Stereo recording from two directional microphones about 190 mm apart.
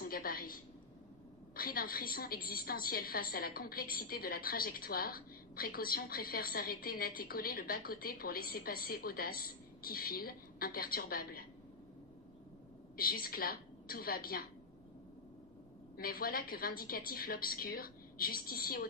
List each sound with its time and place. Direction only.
0.0 s a sound: 50° left (ahead or behind)
1.5 s a woman's voice: 50° left (ahead or behind)
12.9 s a woman's voice: 50° left (ahead or behind)
16.0 s a woman's voice: 50° left (ahead or behind)